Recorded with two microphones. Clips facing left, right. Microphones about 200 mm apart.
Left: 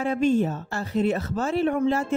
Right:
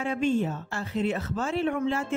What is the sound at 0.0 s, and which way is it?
A woman's voice, 40° left (ahead or behind).